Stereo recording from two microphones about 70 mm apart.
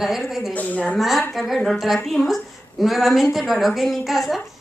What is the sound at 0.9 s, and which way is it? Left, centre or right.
A woman's voice, centre.